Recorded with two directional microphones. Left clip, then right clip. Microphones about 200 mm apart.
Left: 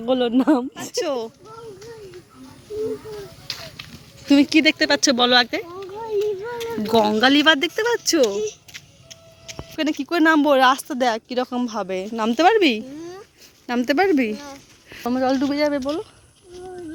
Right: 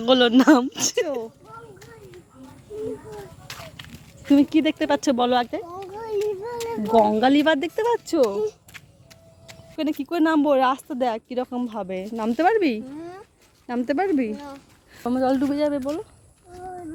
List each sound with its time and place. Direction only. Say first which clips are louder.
0.0 s speech: right 3 dB; centre (ahead or behind)
3.4 s a sound: left 5 dB; centre (ahead or behind)
4.3 s speech: left 3 dB; 15° right (ahead or behind)
6.0 s a sound: left 3 dB; 30° right (ahead or behind)
6.8 s speech: left 1 dB; centre (ahead or behind)
7.9 s speech: left 2 dB; centre (ahead or behind)
9.7 s speech: left 3 dB; 5° right (ahead or behind)
15.0 s speech: left 1 dB; 10° right (ahead or behind)